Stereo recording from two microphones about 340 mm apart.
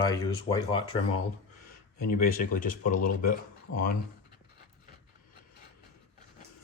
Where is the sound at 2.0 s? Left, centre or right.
Left.